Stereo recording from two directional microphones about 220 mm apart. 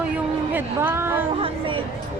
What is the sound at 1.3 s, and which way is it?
Speech, 25° right (ahead or behind).